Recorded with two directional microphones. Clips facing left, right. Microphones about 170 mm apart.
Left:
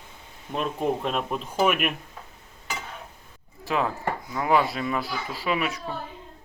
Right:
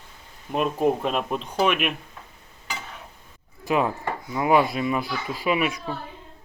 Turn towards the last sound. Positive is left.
turn(degrees=-15)  # may be behind; listen again after turning